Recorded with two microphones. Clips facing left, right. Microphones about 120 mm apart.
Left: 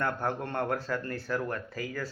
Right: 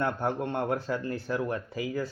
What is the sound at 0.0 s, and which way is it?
Speech, 15° right (ahead or behind).